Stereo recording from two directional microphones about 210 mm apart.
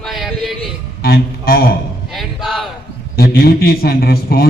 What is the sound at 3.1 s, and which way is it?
A man's voice, 45° left (ahead or behind).